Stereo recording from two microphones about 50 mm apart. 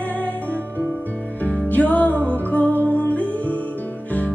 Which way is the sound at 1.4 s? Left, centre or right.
Left.